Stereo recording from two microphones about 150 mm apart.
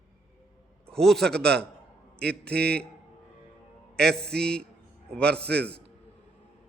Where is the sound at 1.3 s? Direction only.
90° right.